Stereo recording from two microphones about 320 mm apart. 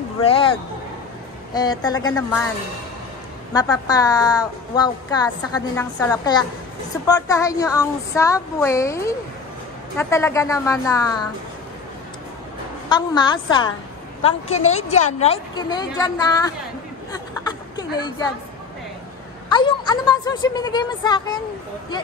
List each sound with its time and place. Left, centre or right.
0.2 s a woman's voice: centre
3.5 s a woman's voice: centre
12.9 s a woman's voice: centre
17.1 s a sound: centre
19.5 s a woman's voice: centre